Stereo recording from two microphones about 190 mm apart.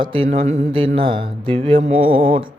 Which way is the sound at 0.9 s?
25° right (ahead or behind).